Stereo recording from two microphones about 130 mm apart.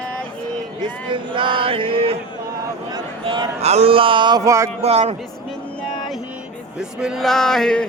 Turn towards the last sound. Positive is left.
turn(degrees=5)  # may be behind; listen again after turning